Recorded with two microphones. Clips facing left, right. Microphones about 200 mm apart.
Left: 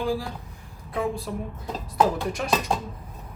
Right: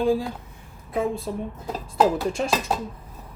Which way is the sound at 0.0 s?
20° right (ahead or behind).